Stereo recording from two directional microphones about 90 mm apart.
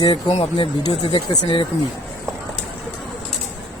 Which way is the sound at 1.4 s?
75° left (ahead or behind).